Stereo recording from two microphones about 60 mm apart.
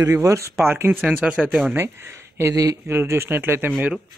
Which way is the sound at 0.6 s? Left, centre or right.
Right.